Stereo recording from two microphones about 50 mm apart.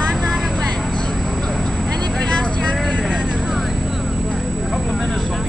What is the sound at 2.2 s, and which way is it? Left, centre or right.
Vehicle, centre.